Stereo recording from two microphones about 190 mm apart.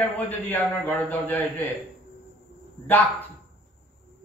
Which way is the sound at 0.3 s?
10° left (ahead or behind).